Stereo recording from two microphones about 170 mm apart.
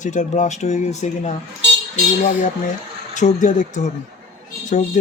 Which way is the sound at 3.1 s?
45° left (ahead or behind).